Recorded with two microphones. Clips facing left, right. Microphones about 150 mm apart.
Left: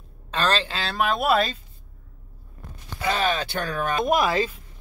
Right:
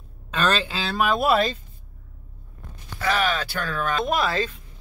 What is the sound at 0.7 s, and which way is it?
Speech, centre (ahead or behind).